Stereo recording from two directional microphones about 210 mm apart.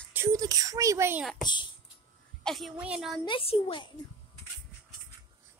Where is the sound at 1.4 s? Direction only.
20° left (ahead or behind).